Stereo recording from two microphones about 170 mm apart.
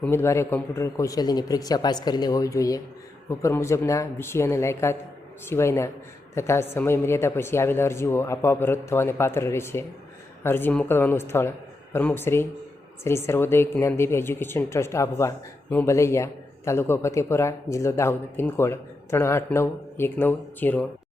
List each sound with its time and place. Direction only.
0.0 s a man's voice: 15° left (ahead or behind)